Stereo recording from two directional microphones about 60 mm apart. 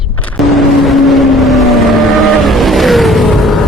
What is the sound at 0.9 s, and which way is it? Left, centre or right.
Vehicle, centre.